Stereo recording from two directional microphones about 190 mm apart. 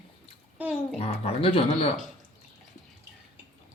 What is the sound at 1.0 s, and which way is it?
Speech, 30° left (ahead or behind).